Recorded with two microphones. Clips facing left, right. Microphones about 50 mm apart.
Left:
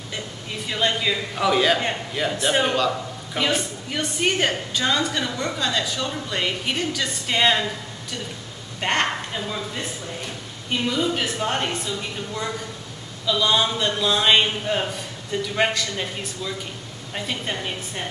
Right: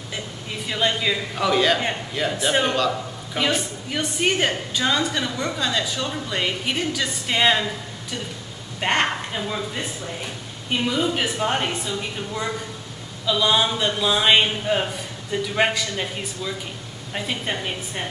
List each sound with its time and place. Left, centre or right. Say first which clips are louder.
0.1 s a woman's voice: even; centre
8.8 s a woman's voice: right 1 dB; centre